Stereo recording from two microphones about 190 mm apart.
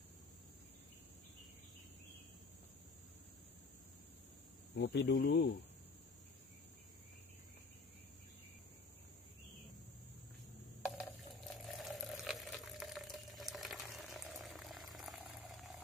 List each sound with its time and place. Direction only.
4.7 s speech: 55° left (ahead or behind)
11.0 s water: centre (ahead or behind)